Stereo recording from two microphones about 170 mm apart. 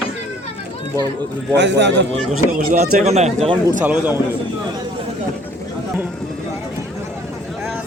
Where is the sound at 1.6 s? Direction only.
90° right.